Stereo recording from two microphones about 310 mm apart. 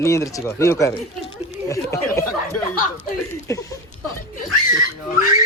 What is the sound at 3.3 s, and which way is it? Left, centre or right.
Speech, centre.